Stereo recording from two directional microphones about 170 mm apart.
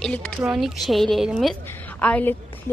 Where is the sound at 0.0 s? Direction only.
5° left (ahead or behind).